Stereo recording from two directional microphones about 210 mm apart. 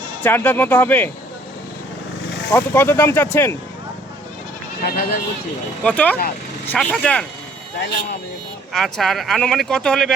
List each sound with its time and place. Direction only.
0.2 s speech: 10° left (ahead or behind)
2.5 s speech: 10° left (ahead or behind)
4.8 s speech: 45° left (ahead or behind)
5.8 s speech: 5° left (ahead or behind)
8.7 s speech: centre (ahead or behind)